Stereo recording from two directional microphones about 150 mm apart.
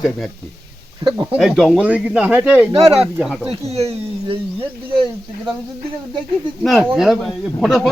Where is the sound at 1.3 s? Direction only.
Centre (ahead or behind).